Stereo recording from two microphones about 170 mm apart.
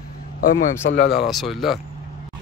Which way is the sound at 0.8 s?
60° left (ahead or behind).